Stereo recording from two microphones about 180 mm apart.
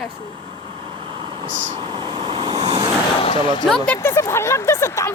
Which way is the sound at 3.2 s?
30° left (ahead or behind).